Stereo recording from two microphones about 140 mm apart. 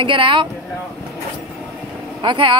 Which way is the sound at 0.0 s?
35° right (ahead or behind).